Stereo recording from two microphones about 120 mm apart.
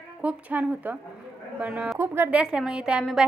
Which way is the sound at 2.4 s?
5° right (ahead or behind).